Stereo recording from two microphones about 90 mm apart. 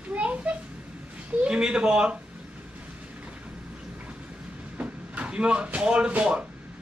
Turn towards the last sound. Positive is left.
turn(degrees=-10)  # may be behind; listen again after turning